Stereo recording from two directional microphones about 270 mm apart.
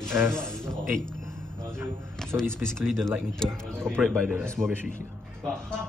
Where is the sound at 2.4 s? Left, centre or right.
Centre.